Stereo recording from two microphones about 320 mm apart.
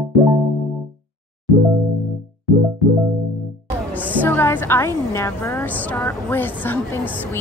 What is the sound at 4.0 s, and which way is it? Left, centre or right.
A woman's voice, centre.